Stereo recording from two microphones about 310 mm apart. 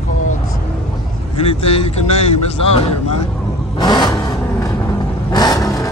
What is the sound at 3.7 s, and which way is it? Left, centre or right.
Vehicle, centre.